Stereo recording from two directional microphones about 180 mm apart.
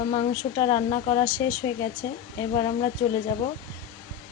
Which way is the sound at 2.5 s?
30° left (ahead or behind).